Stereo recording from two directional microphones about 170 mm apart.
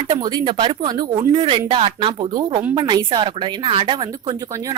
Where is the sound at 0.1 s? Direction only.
25° right (ahead or behind).